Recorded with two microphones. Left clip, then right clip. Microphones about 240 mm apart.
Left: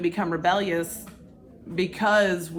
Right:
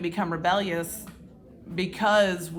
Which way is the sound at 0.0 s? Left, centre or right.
Right.